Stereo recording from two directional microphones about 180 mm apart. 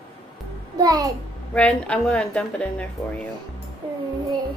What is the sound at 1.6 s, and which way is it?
A woman's voice, 5° left (ahead or behind).